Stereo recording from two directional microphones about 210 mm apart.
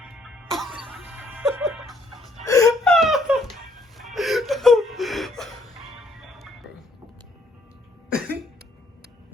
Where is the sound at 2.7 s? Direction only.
Centre (ahead or behind).